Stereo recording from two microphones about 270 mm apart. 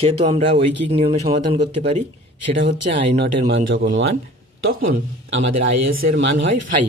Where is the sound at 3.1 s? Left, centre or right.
Right.